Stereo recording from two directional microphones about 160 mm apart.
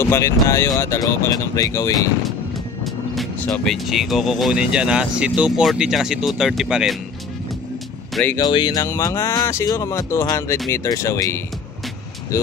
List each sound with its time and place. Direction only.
0.0 s speech: 15° left (ahead or behind)
3.3 s speech: 10° left (ahead or behind)
8.1 s speech: 10° left (ahead or behind)
8.4 s speech: 30° left (ahead or behind)